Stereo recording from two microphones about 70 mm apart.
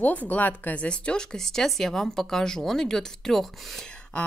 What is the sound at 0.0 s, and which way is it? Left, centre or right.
Speech, left.